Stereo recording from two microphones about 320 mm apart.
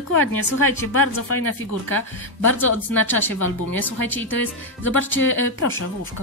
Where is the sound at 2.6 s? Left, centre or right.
Centre.